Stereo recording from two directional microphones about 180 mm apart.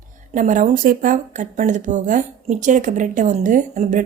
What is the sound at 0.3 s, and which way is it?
Speech, 45° right (ahead or behind).